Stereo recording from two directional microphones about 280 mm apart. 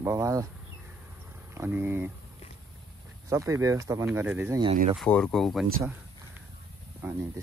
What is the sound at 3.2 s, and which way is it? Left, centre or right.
Speech, centre.